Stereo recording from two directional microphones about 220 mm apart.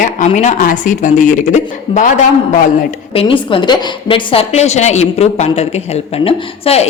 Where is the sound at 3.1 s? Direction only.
25° left (ahead or behind).